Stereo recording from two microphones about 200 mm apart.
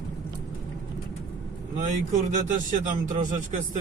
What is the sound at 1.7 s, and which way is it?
Speech, 40° right (ahead or behind).